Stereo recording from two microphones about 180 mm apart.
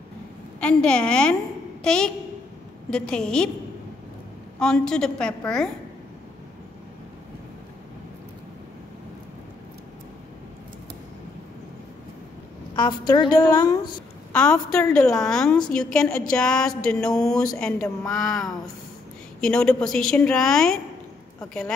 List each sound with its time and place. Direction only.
0.6 s a woman's voice: 5° left (ahead or behind)
4.6 s speech: 5° left (ahead or behind)
12.7 s a woman's voice: 25° left (ahead or behind)
14.3 s speech: 5° left (ahead or behind)